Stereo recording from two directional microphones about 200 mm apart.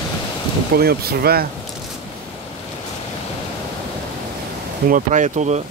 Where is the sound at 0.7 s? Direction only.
50° right (ahead or behind).